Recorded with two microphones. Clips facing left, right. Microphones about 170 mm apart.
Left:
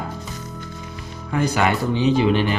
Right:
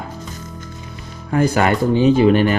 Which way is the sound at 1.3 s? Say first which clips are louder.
Right 4 dB; 45° right (ahead or behind).